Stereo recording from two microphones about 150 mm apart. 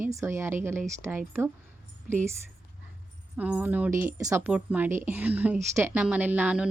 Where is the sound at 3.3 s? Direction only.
10° right (ahead or behind).